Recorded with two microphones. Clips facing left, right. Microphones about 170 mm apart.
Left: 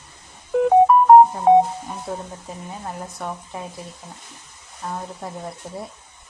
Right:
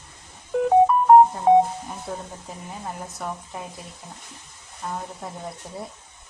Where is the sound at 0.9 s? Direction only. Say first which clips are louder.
Left 6 dB; 65° left (ahead or behind).